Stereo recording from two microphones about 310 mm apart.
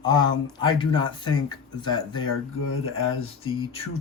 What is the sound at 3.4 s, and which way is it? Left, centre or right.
Speech, centre.